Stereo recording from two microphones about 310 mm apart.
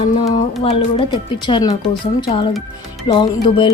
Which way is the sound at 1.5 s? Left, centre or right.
Centre.